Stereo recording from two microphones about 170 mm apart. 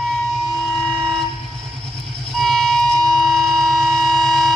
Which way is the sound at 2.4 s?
Centre (ahead or behind).